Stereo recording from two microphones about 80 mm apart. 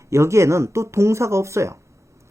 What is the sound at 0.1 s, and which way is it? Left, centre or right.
Speech, right.